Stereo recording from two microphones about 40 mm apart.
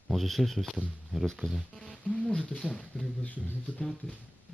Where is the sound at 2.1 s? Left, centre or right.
Left.